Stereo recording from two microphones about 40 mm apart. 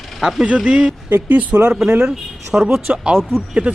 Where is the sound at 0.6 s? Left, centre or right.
Centre.